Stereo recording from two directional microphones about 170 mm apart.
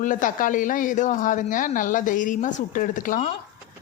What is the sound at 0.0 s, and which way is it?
Speech, 50° left (ahead or behind).